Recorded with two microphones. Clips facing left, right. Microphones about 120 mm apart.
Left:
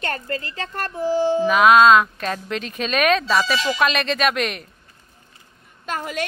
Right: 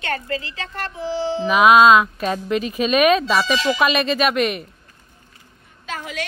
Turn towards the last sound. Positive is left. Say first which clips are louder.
# left 3 dB
turn(degrees=50)  # may be behind; listen again after turning